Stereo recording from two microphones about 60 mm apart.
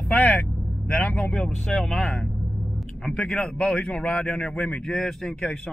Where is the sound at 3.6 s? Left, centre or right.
Centre.